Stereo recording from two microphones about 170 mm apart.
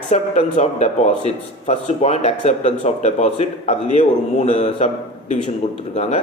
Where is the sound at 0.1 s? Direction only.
40° left (ahead or behind).